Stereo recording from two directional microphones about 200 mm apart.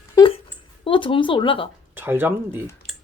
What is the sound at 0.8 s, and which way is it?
Speech, 25° left (ahead or behind).